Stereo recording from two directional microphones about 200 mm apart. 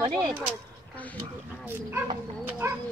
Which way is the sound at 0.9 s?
5° left (ahead or behind).